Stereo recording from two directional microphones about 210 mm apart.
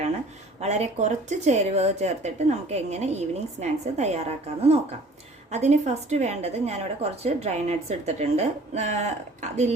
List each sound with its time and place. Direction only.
0.6 s a woman's voice: 30° right (ahead or behind)